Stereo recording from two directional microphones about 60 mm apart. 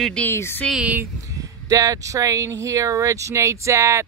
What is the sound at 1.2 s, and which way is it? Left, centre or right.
Speech, right.